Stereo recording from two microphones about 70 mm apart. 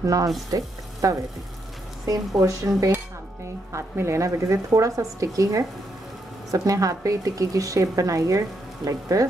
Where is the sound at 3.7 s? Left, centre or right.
Right.